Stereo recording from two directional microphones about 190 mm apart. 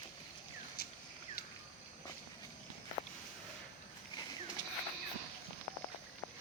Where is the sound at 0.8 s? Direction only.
55° left (ahead or behind).